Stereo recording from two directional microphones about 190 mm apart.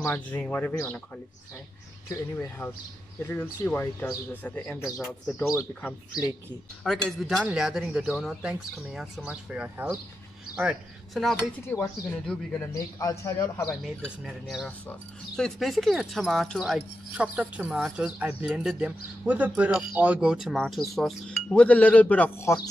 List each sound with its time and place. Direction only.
0.0 s speech: 10° left (ahead or behind)
6.8 s speech: centre (ahead or behind)
11.6 s speech: 15° left (ahead or behind)
13.7 s speech: centre (ahead or behind)